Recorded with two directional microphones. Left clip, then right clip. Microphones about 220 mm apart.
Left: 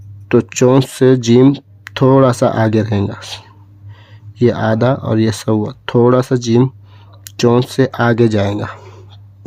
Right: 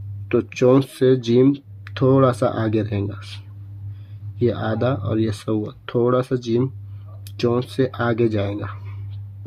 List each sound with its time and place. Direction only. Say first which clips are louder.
0.3 s speech: left 5 dB; 40° left (ahead or behind)